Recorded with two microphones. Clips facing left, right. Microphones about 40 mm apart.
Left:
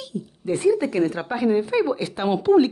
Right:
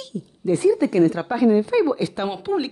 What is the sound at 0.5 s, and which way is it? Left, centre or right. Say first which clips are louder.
A woman's voice: right 2 dB; left.